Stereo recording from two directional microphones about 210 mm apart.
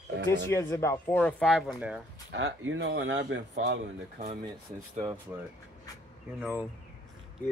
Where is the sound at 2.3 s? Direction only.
60° right (ahead or behind).